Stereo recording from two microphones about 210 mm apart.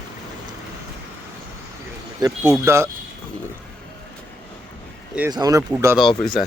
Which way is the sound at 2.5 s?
15° right (ahead or behind).